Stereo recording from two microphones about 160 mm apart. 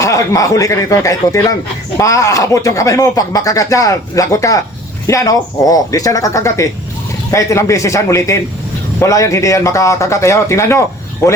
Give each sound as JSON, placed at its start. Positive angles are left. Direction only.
{"t": 0.0, "sound": "speech", "side_deg": 20}